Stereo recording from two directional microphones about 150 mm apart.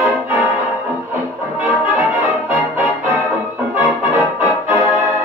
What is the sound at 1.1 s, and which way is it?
Brass instrument, 10° right (ahead or behind).